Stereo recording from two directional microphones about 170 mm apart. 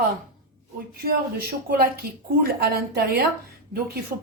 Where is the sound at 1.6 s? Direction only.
65° right (ahead or behind).